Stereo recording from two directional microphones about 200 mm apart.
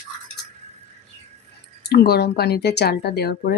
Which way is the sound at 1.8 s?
50° left (ahead or behind).